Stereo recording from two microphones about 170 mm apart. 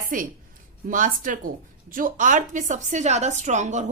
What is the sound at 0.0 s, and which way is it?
A woman's voice, 55° right (ahead or behind).